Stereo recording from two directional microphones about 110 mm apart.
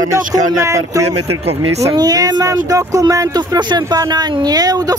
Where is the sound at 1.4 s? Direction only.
65° right (ahead or behind).